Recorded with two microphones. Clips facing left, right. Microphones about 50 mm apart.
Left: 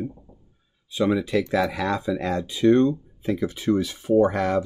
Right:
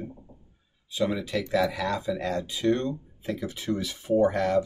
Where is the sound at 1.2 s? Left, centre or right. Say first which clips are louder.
Left 3 dB; left.